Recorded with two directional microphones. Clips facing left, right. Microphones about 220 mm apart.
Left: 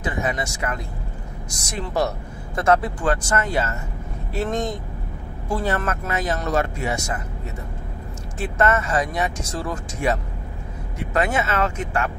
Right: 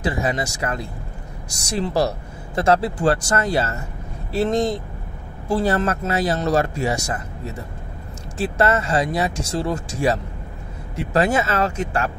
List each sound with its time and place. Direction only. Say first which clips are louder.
0.0 s speech: right 3 dB; 35° right (ahead or behind)
8.4 s speech: right 1 dB; 30° right (ahead or behind)